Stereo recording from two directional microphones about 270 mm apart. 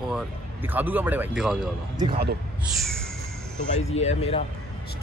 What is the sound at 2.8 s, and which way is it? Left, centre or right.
Speech, centre.